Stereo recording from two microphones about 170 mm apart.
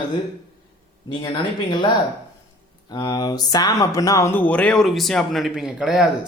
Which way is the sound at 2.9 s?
20° left (ahead or behind).